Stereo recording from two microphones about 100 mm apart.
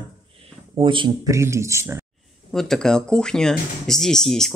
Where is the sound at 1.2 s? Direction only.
30° right (ahead or behind).